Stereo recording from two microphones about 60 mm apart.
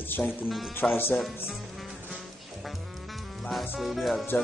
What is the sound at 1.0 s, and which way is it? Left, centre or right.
Speech, left.